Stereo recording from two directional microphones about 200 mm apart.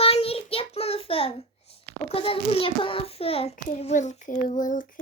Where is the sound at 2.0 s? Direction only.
30° left (ahead or behind).